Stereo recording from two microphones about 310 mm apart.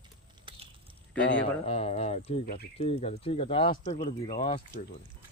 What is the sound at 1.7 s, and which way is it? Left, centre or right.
Speech, centre.